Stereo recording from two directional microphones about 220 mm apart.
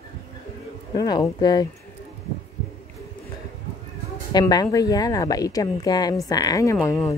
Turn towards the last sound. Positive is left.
turn(degrees=15)  # may be behind; listen again after turning